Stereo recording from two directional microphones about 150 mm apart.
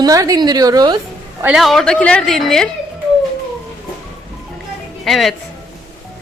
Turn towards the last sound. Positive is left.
turn(degrees=0)  # may be behind; listen again after turning